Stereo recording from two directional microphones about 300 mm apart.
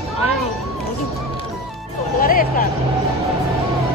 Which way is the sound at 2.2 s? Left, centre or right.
Left.